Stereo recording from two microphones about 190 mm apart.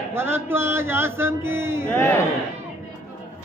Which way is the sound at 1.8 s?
15° left (ahead or behind).